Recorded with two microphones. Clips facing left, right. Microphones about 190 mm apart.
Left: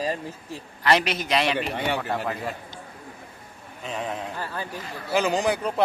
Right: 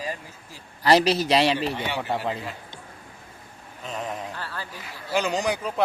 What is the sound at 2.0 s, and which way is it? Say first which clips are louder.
Speech: right 1 dB; 20° right (ahead or behind).